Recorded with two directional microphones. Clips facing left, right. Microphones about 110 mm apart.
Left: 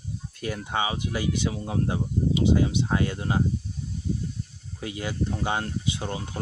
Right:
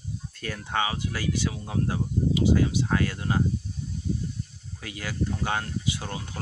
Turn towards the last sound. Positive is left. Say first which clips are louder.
# left 2 dB
turn(degrees=25)  # may be behind; listen again after turning